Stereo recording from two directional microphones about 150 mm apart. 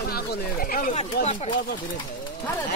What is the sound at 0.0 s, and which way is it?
Speech, 90° left.